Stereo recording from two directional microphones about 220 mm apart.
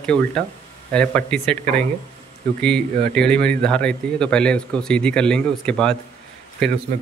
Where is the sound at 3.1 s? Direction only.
5° left (ahead or behind).